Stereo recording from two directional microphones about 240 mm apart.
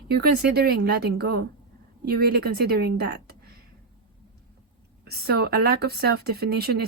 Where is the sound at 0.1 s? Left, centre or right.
Right.